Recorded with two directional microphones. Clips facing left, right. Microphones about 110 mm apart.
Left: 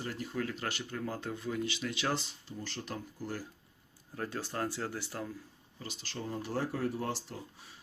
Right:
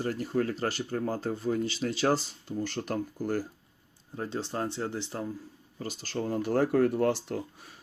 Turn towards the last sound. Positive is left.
turn(degrees=-60)  # may be behind; listen again after turning